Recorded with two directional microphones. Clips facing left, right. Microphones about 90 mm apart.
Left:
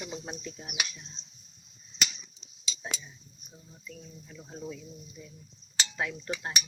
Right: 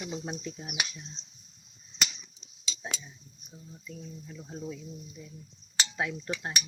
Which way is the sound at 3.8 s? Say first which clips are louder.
Right 3 dB; 10° right (ahead or behind).